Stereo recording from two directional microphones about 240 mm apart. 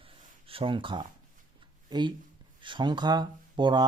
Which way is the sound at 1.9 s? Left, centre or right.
Centre.